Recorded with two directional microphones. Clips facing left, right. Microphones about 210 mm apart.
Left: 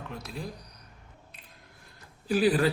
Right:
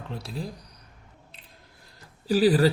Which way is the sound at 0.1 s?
30° right (ahead or behind).